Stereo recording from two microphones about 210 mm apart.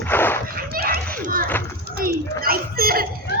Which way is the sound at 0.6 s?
45° right (ahead or behind).